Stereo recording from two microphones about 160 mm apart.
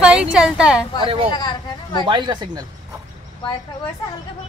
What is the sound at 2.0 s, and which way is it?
Speech, 30° right (ahead or behind).